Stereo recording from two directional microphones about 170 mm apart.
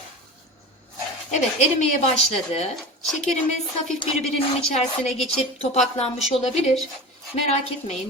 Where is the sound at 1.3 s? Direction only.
40° left (ahead or behind).